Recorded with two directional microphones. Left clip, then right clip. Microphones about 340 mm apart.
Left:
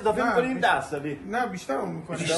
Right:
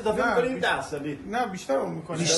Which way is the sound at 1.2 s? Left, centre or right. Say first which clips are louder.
Right 1 dB; centre.